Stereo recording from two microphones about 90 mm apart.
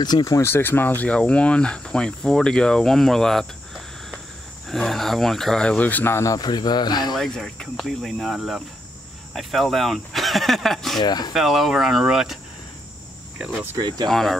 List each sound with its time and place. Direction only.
0.0 s speech: 45° left (ahead or behind)
0.4 s speech: 25° left (ahead or behind)
6.3 s speech: 50° left (ahead or behind)
7.2 s speech: 5° left (ahead or behind)
11.0 s speech: 50° left (ahead or behind)
11.3 s speech: centre (ahead or behind)
13.7 s speech: 50° right (ahead or behind)
14.0 s speech: 5° left (ahead or behind)